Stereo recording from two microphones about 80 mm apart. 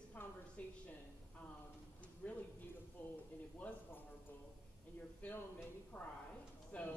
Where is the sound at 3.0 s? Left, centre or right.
Centre.